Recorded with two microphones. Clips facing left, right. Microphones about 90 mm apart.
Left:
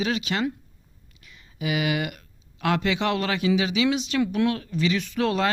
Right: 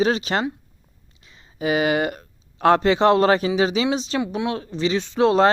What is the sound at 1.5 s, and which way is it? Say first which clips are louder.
A man's voice: right 6 dB; 35° right (ahead or behind).